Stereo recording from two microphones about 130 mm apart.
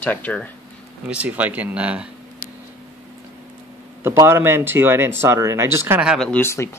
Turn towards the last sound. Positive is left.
turn(degrees=20)  # may be behind; listen again after turning